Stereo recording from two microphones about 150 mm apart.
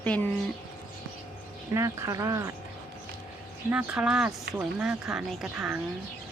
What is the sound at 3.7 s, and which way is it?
Speech, 10° right (ahead or behind).